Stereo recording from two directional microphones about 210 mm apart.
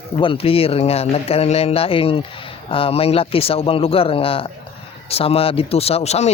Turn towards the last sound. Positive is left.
turn(degrees=30)  # may be behind; listen again after turning